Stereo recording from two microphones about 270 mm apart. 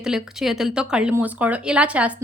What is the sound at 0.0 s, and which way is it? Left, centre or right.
A woman's voice, centre.